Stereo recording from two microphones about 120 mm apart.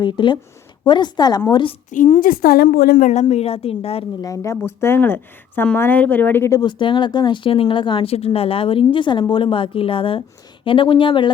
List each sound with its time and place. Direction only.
0.0 s speech: 40° left (ahead or behind)
1.9 s a woman's voice: 90° left
3.0 s a woman's voice: 75° left (ahead or behind); by 4.0 s 55° left (ahead or behind)
4.2 s a woman's voice: 25° left (ahead or behind)
6.6 s speech: 40° left (ahead or behind)